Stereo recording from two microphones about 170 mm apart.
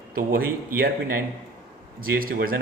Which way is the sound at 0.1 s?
60° right (ahead or behind).